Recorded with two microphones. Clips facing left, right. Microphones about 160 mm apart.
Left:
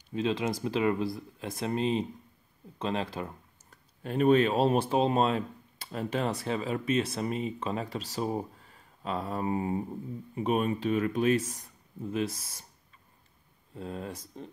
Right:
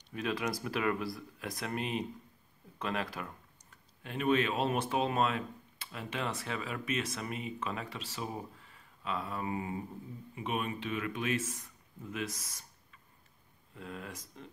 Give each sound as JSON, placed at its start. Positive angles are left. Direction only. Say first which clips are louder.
{"t": 0.1, "sound": "speech", "louder": "left 5 dB", "side_deg": 25}
{"t": 4.0, "sound": "speech", "louder": "left 7 dB", "side_deg": 40}
{"t": 13.7, "sound": "speech", "louder": "left 6 dB", "side_deg": 30}